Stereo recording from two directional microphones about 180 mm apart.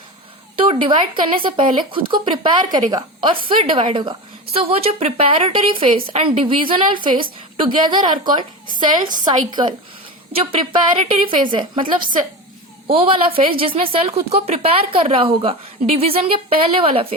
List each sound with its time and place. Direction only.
0.5 s a woman's voice: 30° right (ahead or behind)
12.9 s a woman's voice: 30° right (ahead or behind)